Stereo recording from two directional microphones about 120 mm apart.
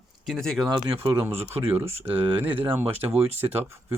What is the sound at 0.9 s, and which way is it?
Speech, 20° right (ahead or behind).